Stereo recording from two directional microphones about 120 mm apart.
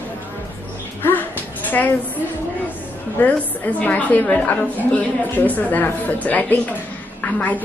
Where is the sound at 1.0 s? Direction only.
15° left (ahead or behind).